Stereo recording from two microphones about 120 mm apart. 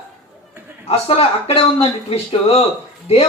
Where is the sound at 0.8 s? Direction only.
55° left (ahead or behind).